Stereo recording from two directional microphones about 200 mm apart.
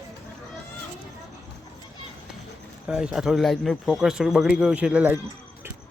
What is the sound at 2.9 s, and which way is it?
Speech, 5° right (ahead or behind).